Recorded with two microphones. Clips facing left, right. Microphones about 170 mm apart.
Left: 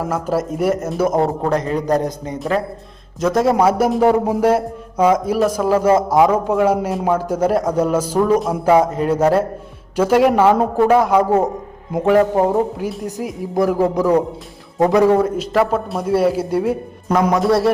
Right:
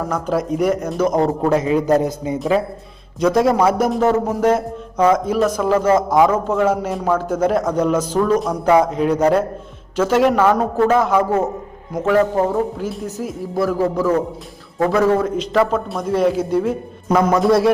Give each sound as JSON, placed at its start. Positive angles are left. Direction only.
{"t": 0.1, "sound": "a man's voice", "side_deg": 5}
{"t": 1.5, "sound": "speech", "side_deg": -5}
{"t": 3.2, "sound": "a man's voice", "side_deg": 0}
{"t": 17.1, "sound": "a man's voice", "side_deg": 0}